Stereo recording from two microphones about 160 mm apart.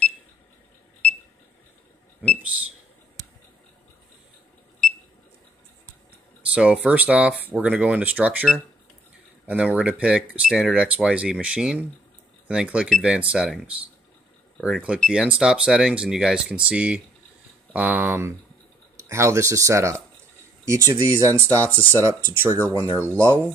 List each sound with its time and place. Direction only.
6.5 s speech: 5° right (ahead or behind)
9.5 s speech: 10° right (ahead or behind)